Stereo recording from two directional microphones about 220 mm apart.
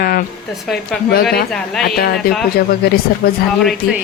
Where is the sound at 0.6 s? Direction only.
Centre (ahead or behind).